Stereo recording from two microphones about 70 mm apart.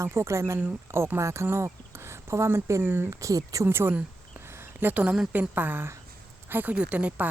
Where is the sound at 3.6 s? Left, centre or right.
Right.